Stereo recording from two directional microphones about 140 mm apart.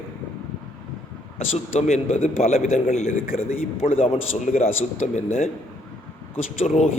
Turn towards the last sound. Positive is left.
turn(degrees=55)  # may be behind; listen again after turning